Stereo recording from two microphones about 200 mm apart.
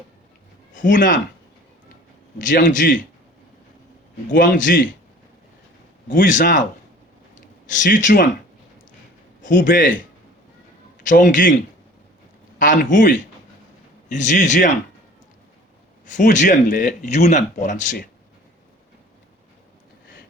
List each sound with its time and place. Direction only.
0.9 s speech: 40° left (ahead or behind)
2.4 s speech: 40° left (ahead or behind)
4.3 s speech: 40° left (ahead or behind)
6.1 s speech: 40° left (ahead or behind)
7.7 s speech: 40° left (ahead or behind)
9.6 s speech: 40° left (ahead or behind)
12.5 s speech: 40° left (ahead or behind)
16.0 s speech: 40° left (ahead or behind)